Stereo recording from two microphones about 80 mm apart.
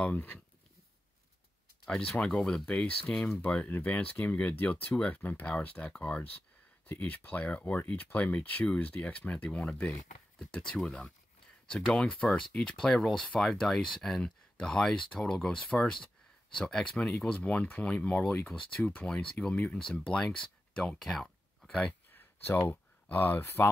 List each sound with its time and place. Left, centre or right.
0.0 s speech: left
1.9 s speech: centre
21.0 s a sound: centre
22.1 s speech: left